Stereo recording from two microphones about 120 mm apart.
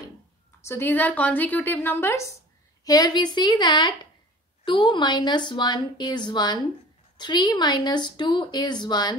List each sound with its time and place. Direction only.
0.7 s a woman's voice: 15° left (ahead or behind)
2.8 s a woman's voice: 30° left (ahead or behind)